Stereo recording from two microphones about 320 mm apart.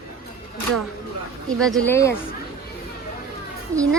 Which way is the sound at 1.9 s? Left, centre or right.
Centre.